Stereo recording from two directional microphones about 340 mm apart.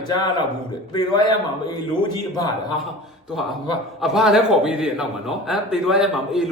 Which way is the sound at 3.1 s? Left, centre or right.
Centre.